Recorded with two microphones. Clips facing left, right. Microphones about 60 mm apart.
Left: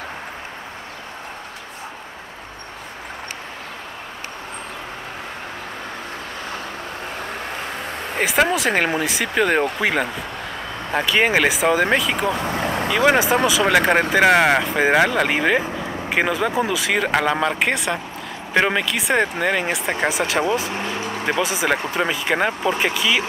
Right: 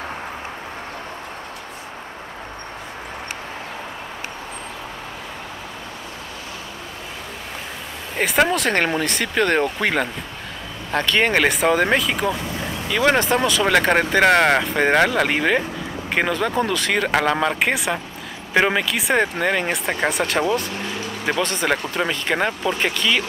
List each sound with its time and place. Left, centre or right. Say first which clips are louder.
8.2 s speech: even; centre
12.4 s vehicle: left 5 dB; left
12.9 s speech: left 1 dB; centre
20.7 s speech: left 2 dB; left
21.3 s speech: even; centre